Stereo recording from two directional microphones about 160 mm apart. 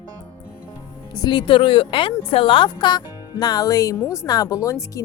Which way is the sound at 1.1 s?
25° left (ahead or behind).